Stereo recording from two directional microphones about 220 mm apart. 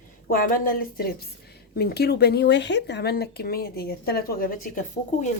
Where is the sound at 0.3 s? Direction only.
40° left (ahead or behind).